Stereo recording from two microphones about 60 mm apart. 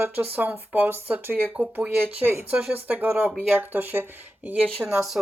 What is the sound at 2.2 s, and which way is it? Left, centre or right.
Speech, right.